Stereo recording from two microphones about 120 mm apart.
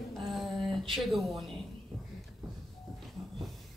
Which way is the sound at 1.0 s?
Centre (ahead or behind).